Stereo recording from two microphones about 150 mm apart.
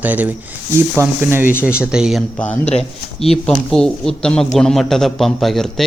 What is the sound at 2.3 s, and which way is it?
A man's voice, 10° left (ahead or behind).